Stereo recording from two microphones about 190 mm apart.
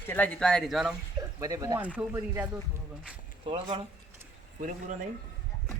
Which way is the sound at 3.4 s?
30° right (ahead or behind).